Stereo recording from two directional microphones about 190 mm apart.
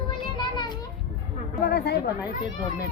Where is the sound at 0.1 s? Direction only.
25° left (ahead or behind).